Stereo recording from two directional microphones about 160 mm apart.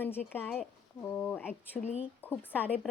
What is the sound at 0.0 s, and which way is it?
Speech, 10° left (ahead or behind).